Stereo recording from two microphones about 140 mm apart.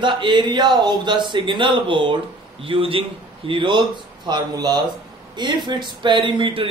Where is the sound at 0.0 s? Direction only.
35° right (ahead or behind).